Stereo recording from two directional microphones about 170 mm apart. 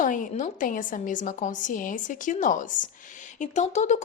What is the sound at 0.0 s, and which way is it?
A woman's voice, 50° left (ahead or behind).